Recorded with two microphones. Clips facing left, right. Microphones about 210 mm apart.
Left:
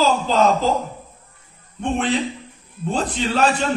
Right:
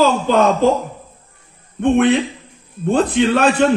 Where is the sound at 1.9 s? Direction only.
60° right (ahead or behind).